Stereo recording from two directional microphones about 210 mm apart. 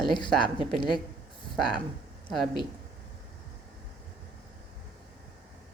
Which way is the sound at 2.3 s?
Centre (ahead or behind).